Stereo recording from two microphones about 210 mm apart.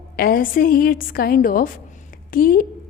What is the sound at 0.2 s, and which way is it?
A woman's voice, 45° left (ahead or behind).